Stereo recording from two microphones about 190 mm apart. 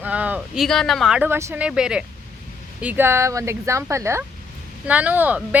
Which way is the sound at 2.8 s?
10° right (ahead or behind).